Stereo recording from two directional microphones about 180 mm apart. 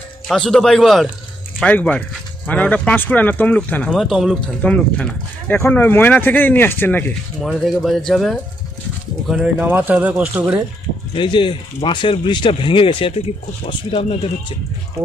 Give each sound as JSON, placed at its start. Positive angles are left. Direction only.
{"t": 0.3, "sound": "speech", "side_deg": 5}
{"t": 11.1, "sound": "speech", "side_deg": 25}